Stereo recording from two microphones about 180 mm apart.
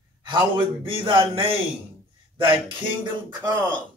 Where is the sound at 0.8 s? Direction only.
30° right (ahead or behind).